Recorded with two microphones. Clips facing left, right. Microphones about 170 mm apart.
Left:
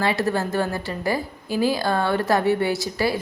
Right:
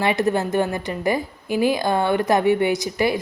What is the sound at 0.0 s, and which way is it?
A woman's voice, 20° right (ahead or behind).